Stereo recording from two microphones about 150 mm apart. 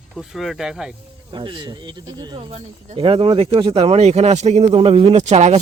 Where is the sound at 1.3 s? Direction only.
35° right (ahead or behind).